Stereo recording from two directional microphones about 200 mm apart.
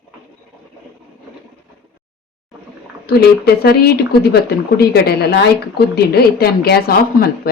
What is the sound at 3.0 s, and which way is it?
A woman's voice, 50° left (ahead or behind).